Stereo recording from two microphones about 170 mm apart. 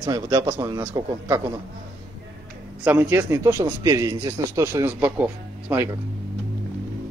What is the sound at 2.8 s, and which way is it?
Speech, 15° right (ahead or behind).